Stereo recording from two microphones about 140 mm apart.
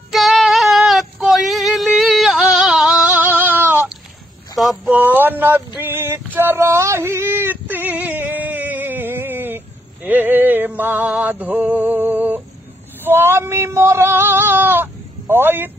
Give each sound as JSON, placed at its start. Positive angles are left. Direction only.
{"t": 0.1, "sound": "female singing", "side_deg": 0}
{"t": 4.9, "sound": "a sound", "side_deg": -15}
{"t": 5.8, "sound": "male singing", "side_deg": -15}
{"t": 10.0, "sound": "music", "side_deg": -15}
{"t": 13.0, "sound": "speech", "side_deg": -15}